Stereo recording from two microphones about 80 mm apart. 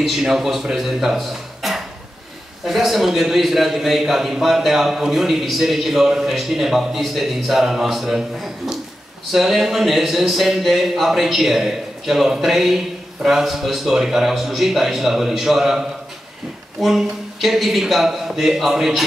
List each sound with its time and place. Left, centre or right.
0.0 s speech: centre